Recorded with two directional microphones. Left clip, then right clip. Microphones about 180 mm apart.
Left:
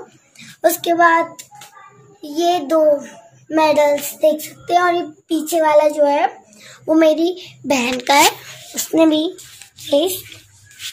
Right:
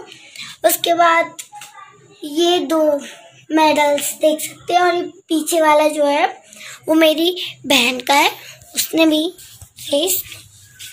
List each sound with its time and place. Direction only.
0.6 s speech: 10° left (ahead or behind)
0.9 s child singing: 15° right (ahead or behind)
2.3 s child singing: 25° right (ahead or behind)
4.2 s a child's voice: 25° right (ahead or behind)
7.0 s a child's voice: 5° left (ahead or behind)
8.3 s a sound: 20° left (ahead or behind)
8.9 s a child's voice: centre (ahead or behind)
9.8 s speech: 15° left (ahead or behind)